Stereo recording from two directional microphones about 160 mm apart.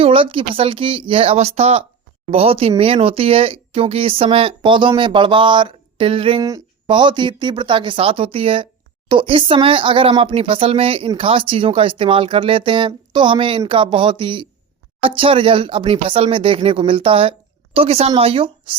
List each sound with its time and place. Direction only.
0.0 s a woman's voice: 35° right (ahead or behind)